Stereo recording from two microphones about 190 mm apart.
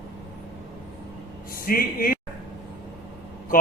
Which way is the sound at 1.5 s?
50° left (ahead or behind).